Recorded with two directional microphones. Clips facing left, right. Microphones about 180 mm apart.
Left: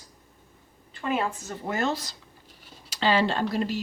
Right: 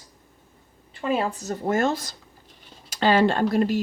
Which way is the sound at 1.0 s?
30° right (ahead or behind).